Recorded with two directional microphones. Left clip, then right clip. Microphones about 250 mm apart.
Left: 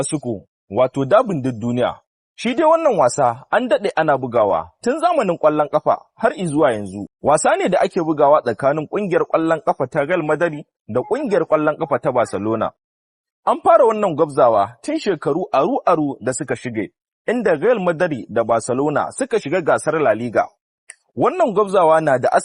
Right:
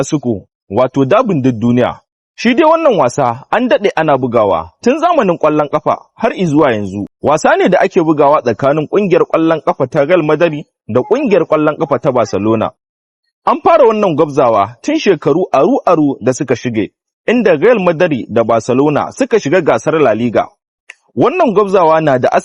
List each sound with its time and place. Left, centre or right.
0.0 s speech: right